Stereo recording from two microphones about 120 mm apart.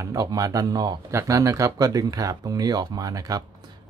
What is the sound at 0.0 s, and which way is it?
Speech, 30° right (ahead or behind).